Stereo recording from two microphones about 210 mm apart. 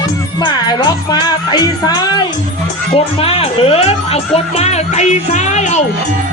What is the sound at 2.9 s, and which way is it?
Speech, 25° left (ahead or behind).